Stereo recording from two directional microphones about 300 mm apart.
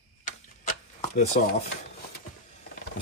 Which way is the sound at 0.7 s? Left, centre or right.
Left.